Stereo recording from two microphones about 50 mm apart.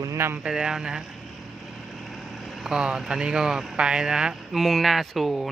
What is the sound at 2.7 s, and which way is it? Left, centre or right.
Speech, centre.